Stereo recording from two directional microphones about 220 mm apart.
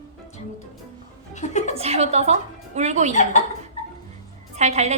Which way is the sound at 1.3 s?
30° left (ahead or behind).